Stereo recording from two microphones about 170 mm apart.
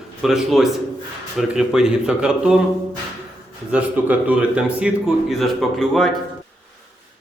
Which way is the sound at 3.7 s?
10° right (ahead or behind).